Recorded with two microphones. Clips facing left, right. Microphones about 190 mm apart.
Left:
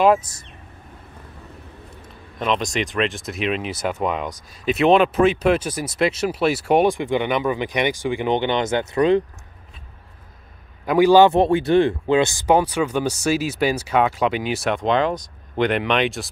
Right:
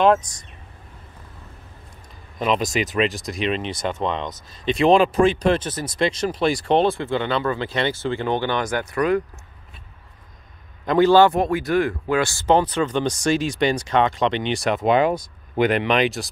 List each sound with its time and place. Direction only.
0.0 s speech: 5° left (ahead or behind)
2.3 s speech: 5° right (ahead or behind); by 9.2 s 25° left (ahead or behind)
10.9 s speech: 10° left (ahead or behind)
11.3 s speech: 30° left (ahead or behind); by 16.3 s centre (ahead or behind)